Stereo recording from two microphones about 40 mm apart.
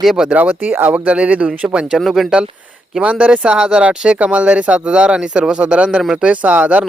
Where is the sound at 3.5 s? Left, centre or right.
Centre.